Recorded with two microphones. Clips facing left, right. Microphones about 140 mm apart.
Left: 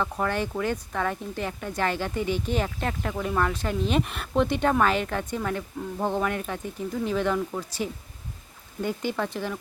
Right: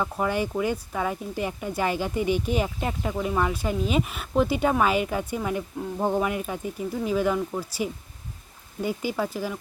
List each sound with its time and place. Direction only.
0.0 s speech: 10° right (ahead or behind)